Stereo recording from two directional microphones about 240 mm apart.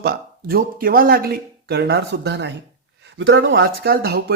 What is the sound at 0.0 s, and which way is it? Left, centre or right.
Speech, right.